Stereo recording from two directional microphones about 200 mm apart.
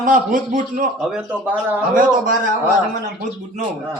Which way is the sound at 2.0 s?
40° right (ahead or behind).